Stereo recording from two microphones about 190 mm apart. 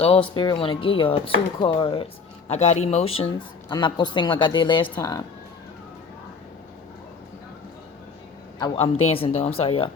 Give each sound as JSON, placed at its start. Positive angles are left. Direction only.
{"t": 0.0, "sound": "speech", "side_deg": 30}
{"t": 8.5, "sound": "a man's voice", "side_deg": 25}